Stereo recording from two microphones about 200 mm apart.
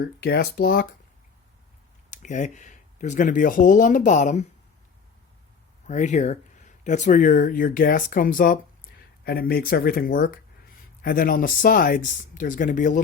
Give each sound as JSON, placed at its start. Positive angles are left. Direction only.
{"t": 0.0, "sound": "speech", "side_deg": 50}
{"t": 2.0, "sound": "speech", "side_deg": 35}
{"t": 5.9, "sound": "speech", "side_deg": 35}